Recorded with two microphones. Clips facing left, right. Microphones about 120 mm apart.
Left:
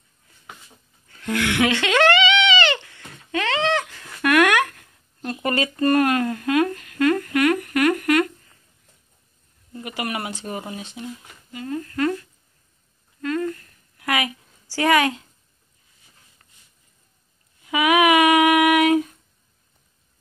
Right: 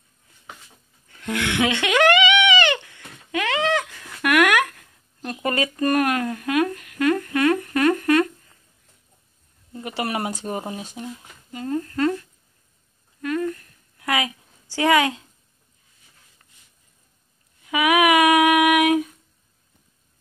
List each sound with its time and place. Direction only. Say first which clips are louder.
1.1 s bleat: left 2 dB; 20° right (ahead or behind)
3.3 s horse: even; 10° right (ahead or behind)
4.2 s a sound: left 1 dB; 10° right (ahead or behind)
8.0 s humming: right 1 dB; 25° right (ahead or behind)
9.8 s speech: right 3 dB; 35° right (ahead or behind)
11.5 s speech: right 2 dB; 30° right (ahead or behind)
13.2 s a sound: even; 15° right (ahead or behind)
17.7 s female singing: left 1 dB; 10° right (ahead or behind)